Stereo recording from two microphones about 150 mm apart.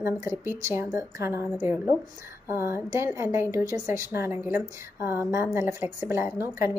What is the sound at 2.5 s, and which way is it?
A woman's voice, 15° right (ahead or behind).